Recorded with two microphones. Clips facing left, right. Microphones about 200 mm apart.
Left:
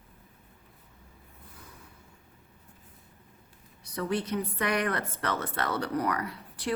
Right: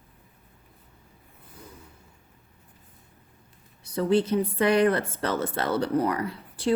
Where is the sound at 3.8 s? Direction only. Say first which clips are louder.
Right 8 dB; 30° right (ahead or behind).